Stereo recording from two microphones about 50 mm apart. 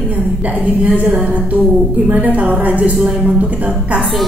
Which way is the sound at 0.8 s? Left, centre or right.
Right.